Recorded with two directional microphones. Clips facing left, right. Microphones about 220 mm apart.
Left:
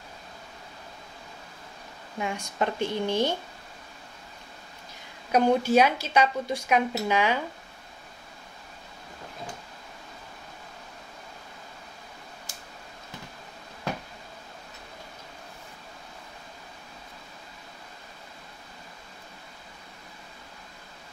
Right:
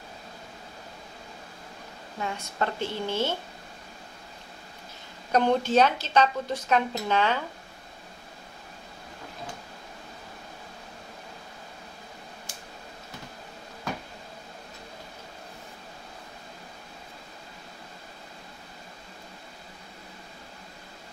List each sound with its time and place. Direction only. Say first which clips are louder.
2.1 s speech: left 2 dB; 15° left (ahead or behind)
5.3 s speech: left 1 dB; 10° left (ahead or behind)